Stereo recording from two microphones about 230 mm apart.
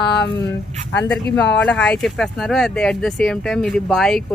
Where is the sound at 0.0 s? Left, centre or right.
Left.